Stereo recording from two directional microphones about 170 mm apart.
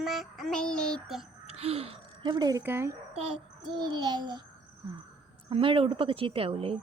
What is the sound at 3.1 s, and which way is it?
Child singing, 30° right (ahead or behind).